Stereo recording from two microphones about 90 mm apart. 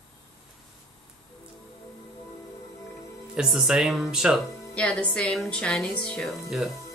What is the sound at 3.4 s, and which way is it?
Speech, 5° right (ahead or behind).